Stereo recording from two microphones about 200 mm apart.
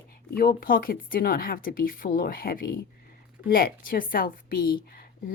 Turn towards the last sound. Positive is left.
turn(degrees=45)  # may be behind; listen again after turning